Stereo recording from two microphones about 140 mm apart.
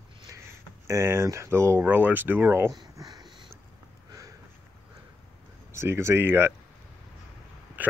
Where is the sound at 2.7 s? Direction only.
30° right (ahead or behind).